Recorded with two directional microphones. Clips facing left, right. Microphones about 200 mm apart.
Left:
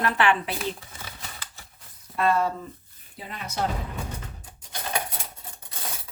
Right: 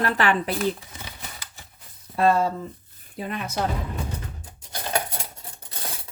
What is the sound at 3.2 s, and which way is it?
Speech, 55° right (ahead or behind).